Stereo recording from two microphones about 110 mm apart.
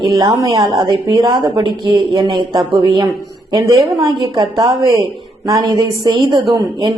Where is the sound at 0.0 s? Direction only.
35° right (ahead or behind).